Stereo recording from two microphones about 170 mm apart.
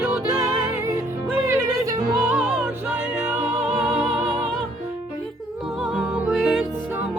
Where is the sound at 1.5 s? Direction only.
20° right (ahead or behind).